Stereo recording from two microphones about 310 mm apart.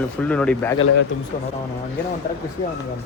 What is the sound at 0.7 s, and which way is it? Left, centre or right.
Speech, left.